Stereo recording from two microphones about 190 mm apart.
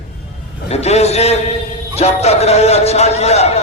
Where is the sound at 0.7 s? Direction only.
35° left (ahead or behind).